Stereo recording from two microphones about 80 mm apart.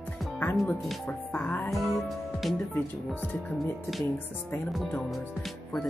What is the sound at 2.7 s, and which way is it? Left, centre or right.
Speech, left.